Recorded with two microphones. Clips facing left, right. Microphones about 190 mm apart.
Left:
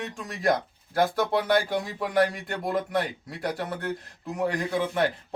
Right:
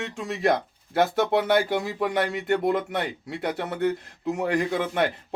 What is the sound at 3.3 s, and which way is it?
Speech, 25° right (ahead or behind).